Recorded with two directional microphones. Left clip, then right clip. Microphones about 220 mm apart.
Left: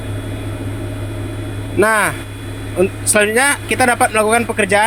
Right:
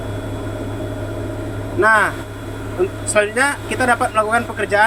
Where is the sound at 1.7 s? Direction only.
50° left (ahead or behind).